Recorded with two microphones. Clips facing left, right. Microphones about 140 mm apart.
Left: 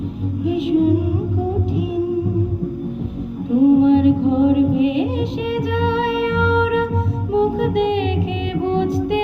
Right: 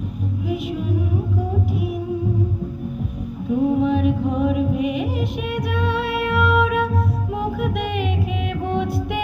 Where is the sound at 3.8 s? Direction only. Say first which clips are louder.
Left 6 dB; 25° left (ahead or behind).